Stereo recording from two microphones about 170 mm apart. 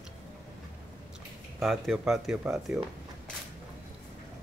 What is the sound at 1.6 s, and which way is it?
Speech, centre (ahead or behind).